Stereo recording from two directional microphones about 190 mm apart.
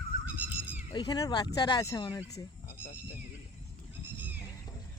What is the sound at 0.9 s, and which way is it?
Speech, 20° left (ahead or behind).